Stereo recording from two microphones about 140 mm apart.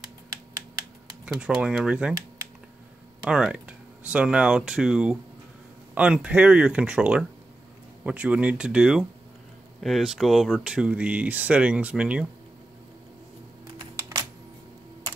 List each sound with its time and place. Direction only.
1.2 s speech: 5° right (ahead or behind)
3.3 s speech: 5° right (ahead or behind)
13.9 s computer keyboard: 25° right (ahead or behind)